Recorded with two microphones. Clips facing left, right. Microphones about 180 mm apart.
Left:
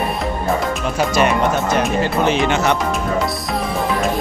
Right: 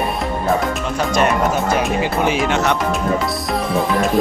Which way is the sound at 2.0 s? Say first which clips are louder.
Left 1 dB; 10° right (ahead or behind).